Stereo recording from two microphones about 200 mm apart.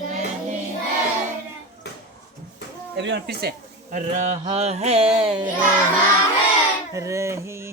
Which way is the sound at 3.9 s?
35° right (ahead or behind).